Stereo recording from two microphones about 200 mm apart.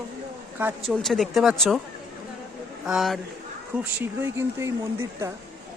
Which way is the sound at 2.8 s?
Centre (ahead or behind).